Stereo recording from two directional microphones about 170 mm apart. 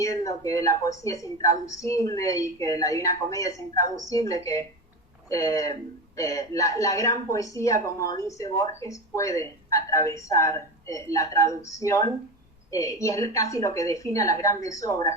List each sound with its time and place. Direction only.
0.0 s a woman's voice: 20° left (ahead or behind)